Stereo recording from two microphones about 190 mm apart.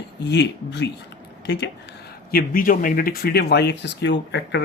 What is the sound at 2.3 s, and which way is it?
Speech, 50° left (ahead or behind).